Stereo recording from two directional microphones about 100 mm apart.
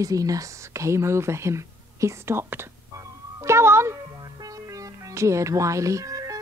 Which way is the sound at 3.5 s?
25° right (ahead or behind).